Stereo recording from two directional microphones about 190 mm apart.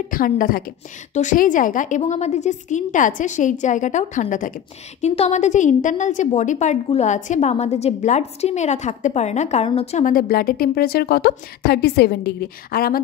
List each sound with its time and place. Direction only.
0.1 s a woman's voice: 50° left (ahead or behind)